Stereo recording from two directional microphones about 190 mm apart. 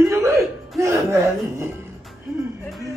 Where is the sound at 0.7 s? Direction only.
15° right (ahead or behind).